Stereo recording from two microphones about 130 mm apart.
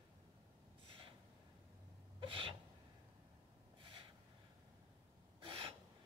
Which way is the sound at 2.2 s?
40° right (ahead or behind).